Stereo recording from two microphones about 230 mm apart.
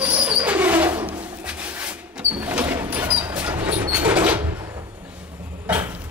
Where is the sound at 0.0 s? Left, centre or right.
Centre.